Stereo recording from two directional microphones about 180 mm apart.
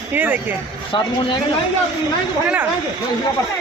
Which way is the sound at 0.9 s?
25° left (ahead or behind).